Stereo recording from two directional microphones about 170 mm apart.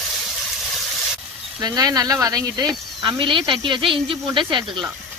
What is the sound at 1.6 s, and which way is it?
Speech, 20° right (ahead or behind).